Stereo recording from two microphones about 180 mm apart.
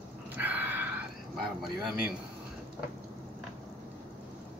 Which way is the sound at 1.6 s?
Centre (ahead or behind).